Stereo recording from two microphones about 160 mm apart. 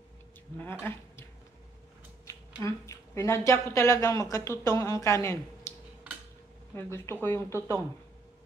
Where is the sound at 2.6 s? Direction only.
20° left (ahead or behind).